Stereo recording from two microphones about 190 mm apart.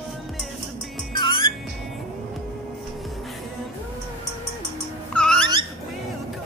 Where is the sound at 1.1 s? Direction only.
25° left (ahead or behind).